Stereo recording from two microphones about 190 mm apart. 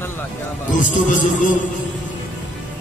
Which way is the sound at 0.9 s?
40° left (ahead or behind).